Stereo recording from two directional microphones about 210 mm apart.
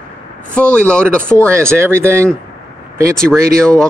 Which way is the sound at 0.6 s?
5° left (ahead or behind).